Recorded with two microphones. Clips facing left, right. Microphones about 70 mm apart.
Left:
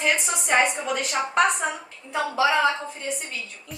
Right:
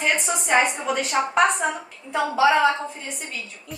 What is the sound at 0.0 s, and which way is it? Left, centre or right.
A woman's voice, centre.